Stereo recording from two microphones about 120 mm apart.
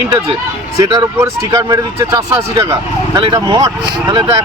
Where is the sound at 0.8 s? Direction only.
30° right (ahead or behind).